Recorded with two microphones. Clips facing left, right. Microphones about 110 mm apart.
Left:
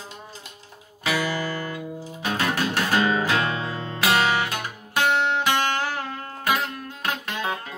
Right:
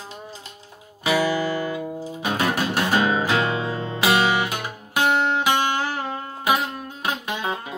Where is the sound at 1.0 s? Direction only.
15° right (ahead or behind).